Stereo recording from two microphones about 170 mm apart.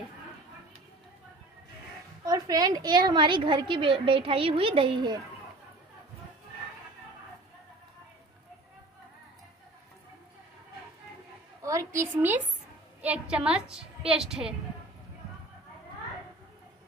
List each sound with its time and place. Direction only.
2.2 s a woman's voice: 20° right (ahead or behind)
11.6 s a sound: 20° right (ahead or behind)
13.0 s a woman's voice: 5° right (ahead or behind)